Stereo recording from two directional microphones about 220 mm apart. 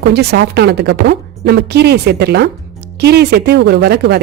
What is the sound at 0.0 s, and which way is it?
A woman's voice, 45° right (ahead or behind).